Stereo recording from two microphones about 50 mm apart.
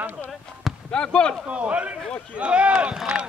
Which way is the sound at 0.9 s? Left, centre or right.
Centre.